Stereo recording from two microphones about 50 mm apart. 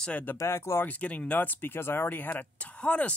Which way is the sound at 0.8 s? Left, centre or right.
Left.